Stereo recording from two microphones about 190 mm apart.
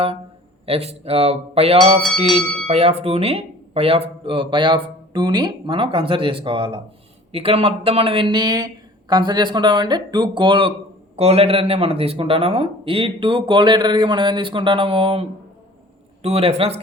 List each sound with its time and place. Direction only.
0.6 s speech: 30° right (ahead or behind)
2.0 s speech: centre (ahead or behind)
2.6 s speech: 30° right (ahead or behind)
16.2 s speech: 35° right (ahead or behind)